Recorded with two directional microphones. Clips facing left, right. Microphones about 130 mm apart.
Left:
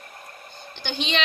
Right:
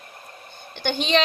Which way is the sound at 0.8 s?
50° right (ahead or behind).